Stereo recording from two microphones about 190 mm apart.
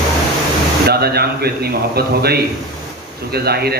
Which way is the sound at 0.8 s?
55° right (ahead or behind).